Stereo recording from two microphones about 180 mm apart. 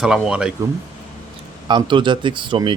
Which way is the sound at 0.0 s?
5° right (ahead or behind).